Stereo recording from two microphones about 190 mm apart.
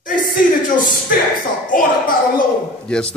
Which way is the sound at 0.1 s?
45° left (ahead or behind).